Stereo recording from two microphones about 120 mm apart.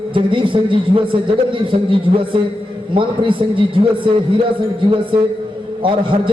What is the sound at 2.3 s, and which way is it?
A man's voice, 45° right (ahead or behind).